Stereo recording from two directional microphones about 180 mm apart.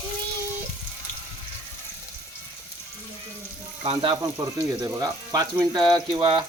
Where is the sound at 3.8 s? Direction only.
25° right (ahead or behind).